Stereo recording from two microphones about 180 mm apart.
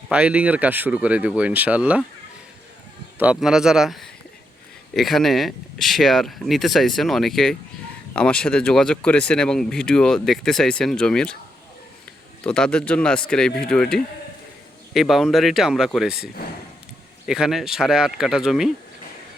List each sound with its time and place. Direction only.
0.1 s speech: 5° right (ahead or behind)
3.2 s speech: 5° right (ahead or behind)
12.4 s speech: 5° left (ahead or behind)